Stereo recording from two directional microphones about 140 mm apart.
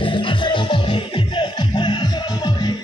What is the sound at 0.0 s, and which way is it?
Music, 35° left (ahead or behind).